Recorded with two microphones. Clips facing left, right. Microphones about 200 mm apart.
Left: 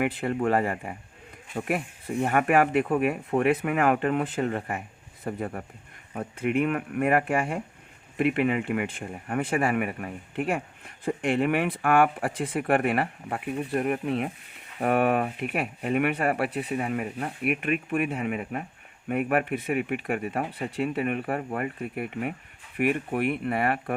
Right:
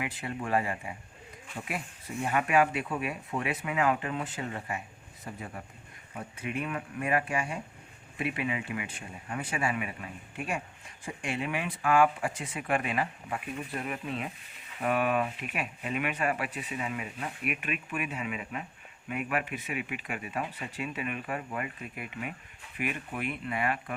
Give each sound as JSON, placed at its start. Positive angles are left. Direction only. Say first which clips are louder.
{"t": 0.0, "sound": "speech", "louder": "left 10 dB", "side_deg": 60}